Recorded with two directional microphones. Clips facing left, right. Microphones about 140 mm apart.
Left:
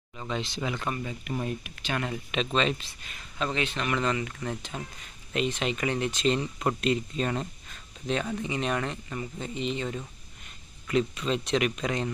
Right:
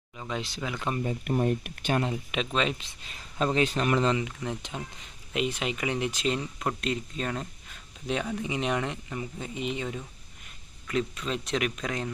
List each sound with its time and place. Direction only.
0.2 s speech: 5° right (ahead or behind)
1.2 s speech: 50° right (ahead or behind)
2.0 s speech: 25° right (ahead or behind)
2.3 s speech: 5° right (ahead or behind)
2.8 s speech: 30° right (ahead or behind)
4.2 s speech: 15° right (ahead or behind); by 7.4 s centre (ahead or behind)
7.7 s a sound: 10° right (ahead or behind)
8.4 s speech: 10° right (ahead or behind)
10.8 s speech: centre (ahead or behind)